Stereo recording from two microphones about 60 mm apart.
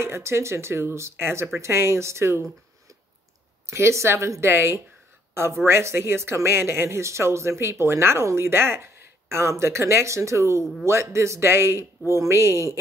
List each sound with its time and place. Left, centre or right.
0.0 s speech: right
3.6 s speech: right
10.6 s a man's voice: centre
10.9 s speech: right